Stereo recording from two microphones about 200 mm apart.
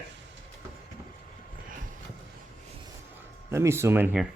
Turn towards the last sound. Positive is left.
turn(degrees=-10)  # may be behind; listen again after turning